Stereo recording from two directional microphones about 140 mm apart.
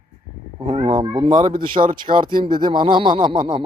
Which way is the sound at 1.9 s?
35° right (ahead or behind).